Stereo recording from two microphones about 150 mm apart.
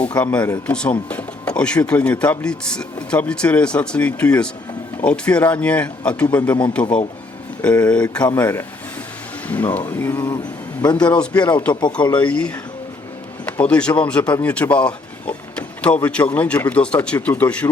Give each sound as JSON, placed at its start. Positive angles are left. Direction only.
{"t": 0.0, "sound": "speech", "side_deg": 10}
{"t": 13.6, "sound": "speech", "side_deg": 5}